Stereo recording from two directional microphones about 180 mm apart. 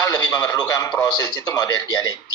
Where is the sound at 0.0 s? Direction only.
20° left (ahead or behind).